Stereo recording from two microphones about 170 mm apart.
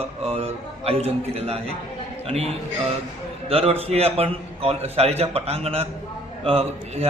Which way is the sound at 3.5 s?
35° right (ahead or behind).